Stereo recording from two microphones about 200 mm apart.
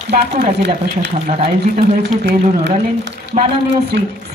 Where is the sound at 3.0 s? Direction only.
60° right (ahead or behind).